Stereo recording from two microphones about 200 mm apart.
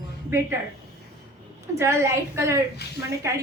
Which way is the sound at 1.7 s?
15° right (ahead or behind).